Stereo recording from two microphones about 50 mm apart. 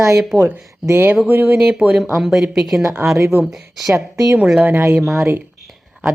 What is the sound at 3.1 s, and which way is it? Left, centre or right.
Speech, right.